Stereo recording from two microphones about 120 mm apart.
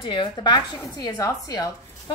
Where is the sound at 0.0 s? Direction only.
40° left (ahead or behind).